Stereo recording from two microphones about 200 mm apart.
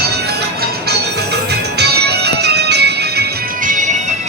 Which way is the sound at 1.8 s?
55° right (ahead or behind).